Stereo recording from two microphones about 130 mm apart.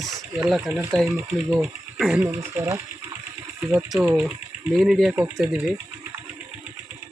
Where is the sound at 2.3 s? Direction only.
20° right (ahead or behind).